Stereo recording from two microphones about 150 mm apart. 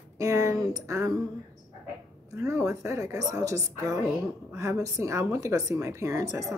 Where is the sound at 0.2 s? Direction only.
20° right (ahead or behind).